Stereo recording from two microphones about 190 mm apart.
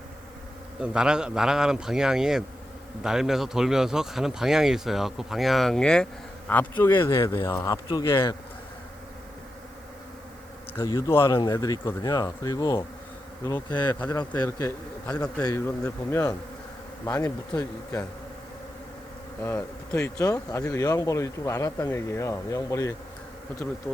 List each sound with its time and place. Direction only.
0.8 s speech: 5° right (ahead or behind); by 8.4 s 25° left (ahead or behind)
10.8 s speech: 20° left (ahead or behind)
19.4 s speech: 15° left (ahead or behind)